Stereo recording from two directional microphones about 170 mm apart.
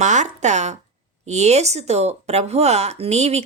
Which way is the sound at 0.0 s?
45° right (ahead or behind).